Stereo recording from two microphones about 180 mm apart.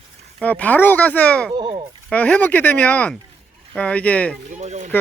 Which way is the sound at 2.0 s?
10° left (ahead or behind).